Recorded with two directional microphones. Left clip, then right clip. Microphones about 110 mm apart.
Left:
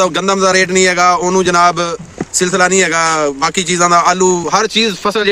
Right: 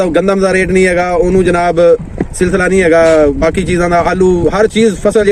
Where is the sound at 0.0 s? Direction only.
30° left (ahead or behind).